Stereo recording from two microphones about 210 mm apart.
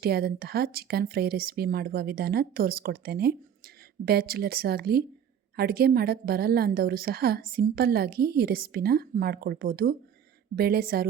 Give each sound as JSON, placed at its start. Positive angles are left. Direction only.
{"t": 0.0, "sound": "a woman's voice", "side_deg": -50}